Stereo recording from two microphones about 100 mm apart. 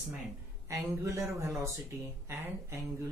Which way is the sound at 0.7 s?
30° right (ahead or behind).